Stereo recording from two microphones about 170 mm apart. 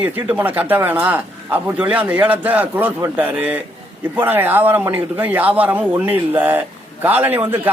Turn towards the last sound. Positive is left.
turn(degrees=-10)  # may be behind; listen again after turning